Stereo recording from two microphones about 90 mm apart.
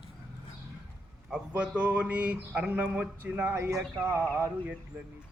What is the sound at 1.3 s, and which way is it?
Speech, 15° right (ahead or behind).